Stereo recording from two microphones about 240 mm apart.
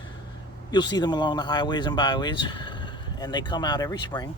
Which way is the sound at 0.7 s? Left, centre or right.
Centre.